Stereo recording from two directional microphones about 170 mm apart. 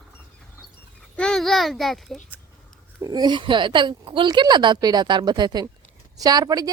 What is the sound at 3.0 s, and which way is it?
Speech, 25° right (ahead or behind).